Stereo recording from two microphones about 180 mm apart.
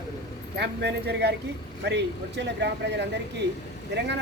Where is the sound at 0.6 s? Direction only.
65° right (ahead or behind).